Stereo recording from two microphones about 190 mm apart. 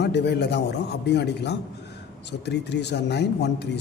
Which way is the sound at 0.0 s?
65° left (ahead or behind).